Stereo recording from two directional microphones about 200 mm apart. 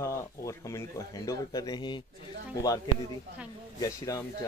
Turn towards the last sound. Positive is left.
turn(degrees=20)  # may be behind; listen again after turning